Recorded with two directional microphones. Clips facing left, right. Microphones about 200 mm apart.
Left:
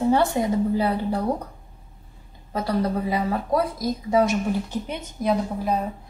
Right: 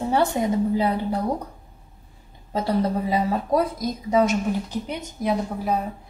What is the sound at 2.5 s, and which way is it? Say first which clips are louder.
A woman's voice: right 1 dB; 25° right (ahead or behind).